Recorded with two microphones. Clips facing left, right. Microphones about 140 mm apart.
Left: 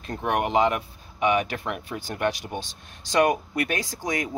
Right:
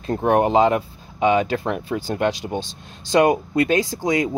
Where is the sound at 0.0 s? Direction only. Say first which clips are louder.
Right 8 dB; 30° right (ahead or behind).